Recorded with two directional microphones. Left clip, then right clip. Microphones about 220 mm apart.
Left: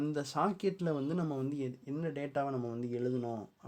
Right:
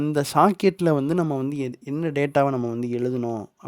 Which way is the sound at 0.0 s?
50° right (ahead or behind).